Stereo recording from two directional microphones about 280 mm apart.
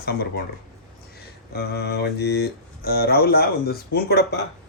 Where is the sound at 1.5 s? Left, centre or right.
Left.